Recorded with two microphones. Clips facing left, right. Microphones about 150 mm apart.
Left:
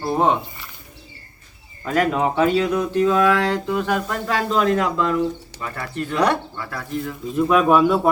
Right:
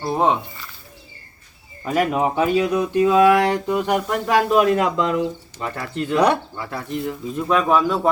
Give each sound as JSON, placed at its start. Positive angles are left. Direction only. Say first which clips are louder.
{"t": 0.0, "sound": "speech", "louder": "even", "side_deg": 0}
{"t": 1.8, "sound": "speech", "louder": "even", "side_deg": -10}
{"t": 7.3, "sound": "speech", "louder": "left 3 dB", "side_deg": 5}